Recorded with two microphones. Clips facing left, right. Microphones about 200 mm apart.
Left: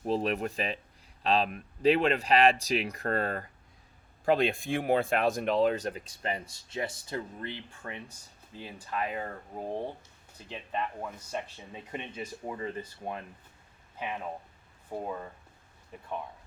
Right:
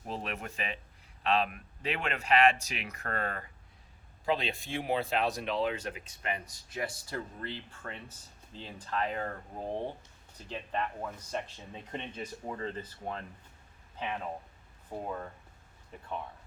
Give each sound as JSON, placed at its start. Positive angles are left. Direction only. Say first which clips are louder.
{"t": 0.0, "sound": "speech", "louder": "left 9 dB", "side_deg": 35}
{"t": 4.3, "sound": "speech", "louder": "left 6 dB", "side_deg": 50}
{"t": 10.3, "sound": "speech", "louder": "even", "side_deg": 10}